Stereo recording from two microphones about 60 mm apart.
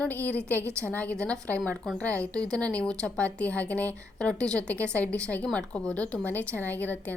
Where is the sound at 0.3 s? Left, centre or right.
Left.